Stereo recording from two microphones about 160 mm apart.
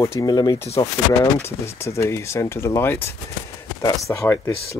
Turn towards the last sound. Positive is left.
turn(degrees=15)  # may be behind; listen again after turning